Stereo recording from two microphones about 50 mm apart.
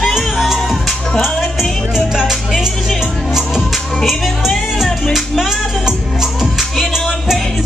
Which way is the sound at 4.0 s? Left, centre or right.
Centre.